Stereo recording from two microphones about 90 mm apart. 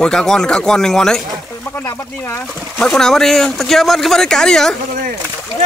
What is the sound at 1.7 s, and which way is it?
Speech, 25° left (ahead or behind).